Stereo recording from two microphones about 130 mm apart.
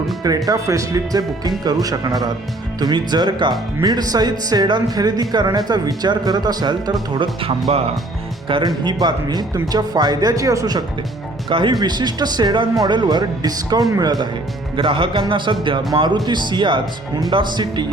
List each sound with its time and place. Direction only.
0.3 s speech: 30° right (ahead or behind)
14.8 s speech: 40° right (ahead or behind)